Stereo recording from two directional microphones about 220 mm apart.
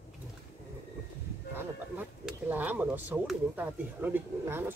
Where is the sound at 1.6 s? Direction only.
10° right (ahead or behind).